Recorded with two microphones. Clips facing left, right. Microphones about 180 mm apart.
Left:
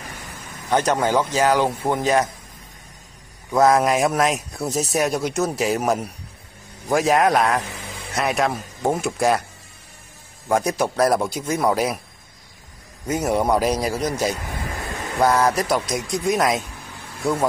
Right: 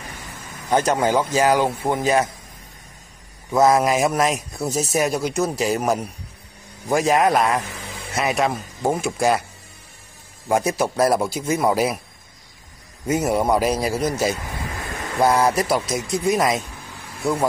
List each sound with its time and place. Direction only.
0.7 s speech: 10° right (ahead or behind)
3.5 s a man's voice: centre (ahead or behind)
10.5 s a man's voice: 5° right (ahead or behind)
13.0 s a man's voice: 5° right (ahead or behind)